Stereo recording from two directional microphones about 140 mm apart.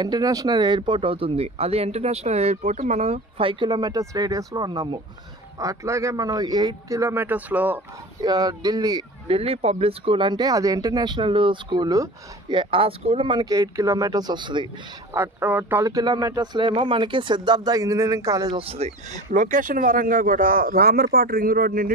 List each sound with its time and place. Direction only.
0.0 s speech: 25° right (ahead or behind); by 7.8 s 10° right (ahead or behind)
8.2 s speech: 30° right (ahead or behind)
9.3 s speech: 45° right (ahead or behind); by 12.5 s 30° right (ahead or behind)
12.5 s speech: 40° right (ahead or behind)
15.1 s speech: 15° right (ahead or behind)
18.6 s speech: 45° right (ahead or behind); by 21.9 s 90° right